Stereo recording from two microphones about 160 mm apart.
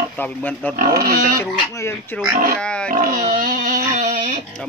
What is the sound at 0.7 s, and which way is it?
Speech, 65° right (ahead or behind).